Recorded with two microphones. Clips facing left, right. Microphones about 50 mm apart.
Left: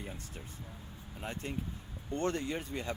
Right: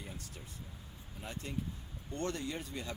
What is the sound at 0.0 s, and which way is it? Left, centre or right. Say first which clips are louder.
Air conditioning: left 3 dB; left.